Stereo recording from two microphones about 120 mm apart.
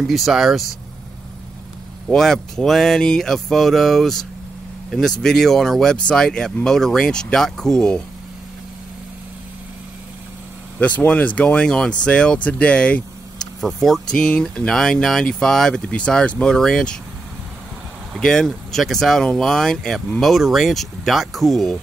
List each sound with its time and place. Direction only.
0.0 s speech: centre (ahead or behind)
2.0 s speech: 5° left (ahead or behind)
5.2 s speech: 5° left (ahead or behind)
10.8 s speech: 10° left (ahead or behind)
18.2 s speech: 5° left (ahead or behind)